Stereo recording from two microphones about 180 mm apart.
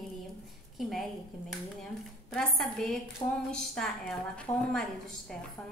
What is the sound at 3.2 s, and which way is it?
Speech, 20° left (ahead or behind).